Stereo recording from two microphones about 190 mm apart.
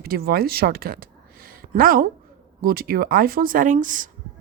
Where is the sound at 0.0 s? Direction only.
55° right (ahead or behind).